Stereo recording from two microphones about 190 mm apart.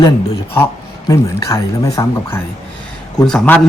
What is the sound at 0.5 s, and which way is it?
Speech, 15° left (ahead or behind).